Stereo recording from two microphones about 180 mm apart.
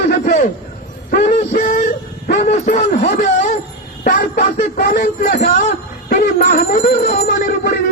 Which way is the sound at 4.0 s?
45° left (ahead or behind).